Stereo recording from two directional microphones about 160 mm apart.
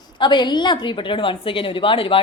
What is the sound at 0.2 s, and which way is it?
Speech, 30° left (ahead or behind).